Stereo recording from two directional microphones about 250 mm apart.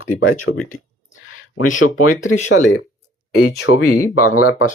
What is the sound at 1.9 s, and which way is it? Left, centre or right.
Speech, left.